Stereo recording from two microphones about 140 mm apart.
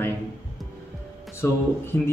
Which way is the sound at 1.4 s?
20° left (ahead or behind).